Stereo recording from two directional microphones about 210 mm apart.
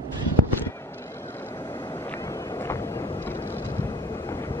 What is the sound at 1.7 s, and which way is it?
Vehicle, 20° left (ahead or behind).